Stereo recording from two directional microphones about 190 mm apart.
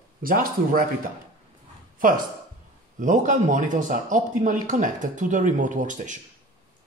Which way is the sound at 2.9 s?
45° right (ahead or behind).